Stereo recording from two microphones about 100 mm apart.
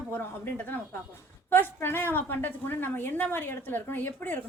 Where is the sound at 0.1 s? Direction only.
20° left (ahead or behind).